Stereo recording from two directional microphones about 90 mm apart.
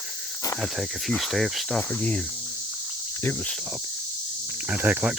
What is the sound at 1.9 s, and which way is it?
Cricket, 15° left (ahead or behind).